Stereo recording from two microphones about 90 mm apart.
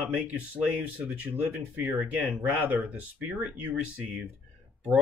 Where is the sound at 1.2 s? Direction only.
15° right (ahead or behind).